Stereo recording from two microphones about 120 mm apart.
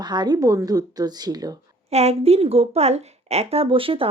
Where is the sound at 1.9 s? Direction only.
60° right (ahead or behind).